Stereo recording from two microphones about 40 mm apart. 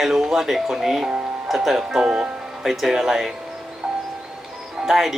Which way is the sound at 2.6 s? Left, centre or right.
Centre.